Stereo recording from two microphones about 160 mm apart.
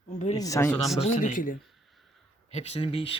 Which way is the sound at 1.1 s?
55° left (ahead or behind).